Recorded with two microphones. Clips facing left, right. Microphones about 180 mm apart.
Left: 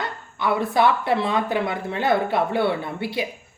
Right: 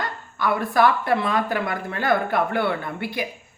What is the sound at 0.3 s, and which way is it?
Speech, 25° left (ahead or behind).